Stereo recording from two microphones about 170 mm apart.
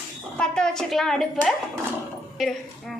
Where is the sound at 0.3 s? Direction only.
5° left (ahead or behind).